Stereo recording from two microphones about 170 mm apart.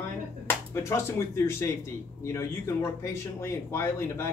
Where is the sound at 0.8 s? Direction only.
15° left (ahead or behind).